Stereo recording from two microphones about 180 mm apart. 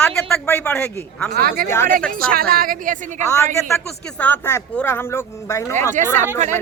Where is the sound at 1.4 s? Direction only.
55° right (ahead or behind).